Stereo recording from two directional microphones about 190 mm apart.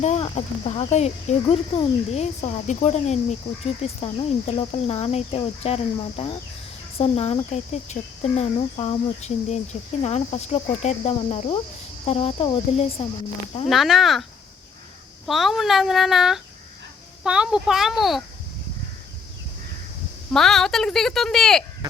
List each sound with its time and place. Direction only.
0.0 s speech: 35° left (ahead or behind)
13.7 s speech: centre (ahead or behind)
15.3 s speech: centre (ahead or behind)
20.3 s speech: centre (ahead or behind)